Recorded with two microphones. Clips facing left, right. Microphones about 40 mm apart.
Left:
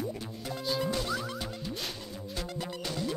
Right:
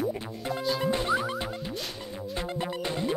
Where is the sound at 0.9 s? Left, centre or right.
Right.